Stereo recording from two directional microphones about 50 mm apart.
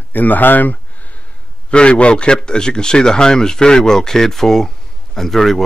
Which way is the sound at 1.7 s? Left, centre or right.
Left.